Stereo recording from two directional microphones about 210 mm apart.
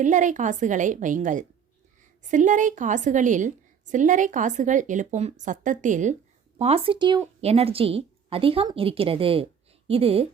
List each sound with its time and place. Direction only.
0.0 s a woman's voice: 35° right (ahead or behind)